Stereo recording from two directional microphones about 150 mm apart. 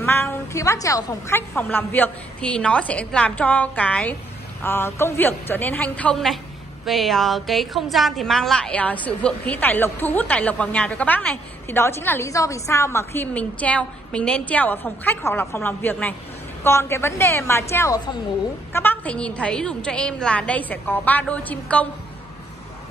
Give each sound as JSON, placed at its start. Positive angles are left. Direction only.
{"t": 0.0, "sound": "music", "side_deg": 15}
{"t": 0.8, "sound": "a woman's voice", "side_deg": 20}